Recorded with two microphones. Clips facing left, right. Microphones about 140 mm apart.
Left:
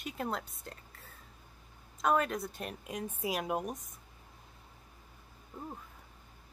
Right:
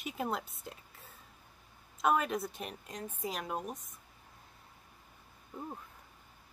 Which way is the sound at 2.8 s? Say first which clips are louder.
Left 5 dB; 10° left (ahead or behind).